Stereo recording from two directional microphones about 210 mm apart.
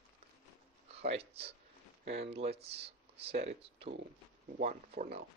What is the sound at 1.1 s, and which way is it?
Speech, 30° right (ahead or behind).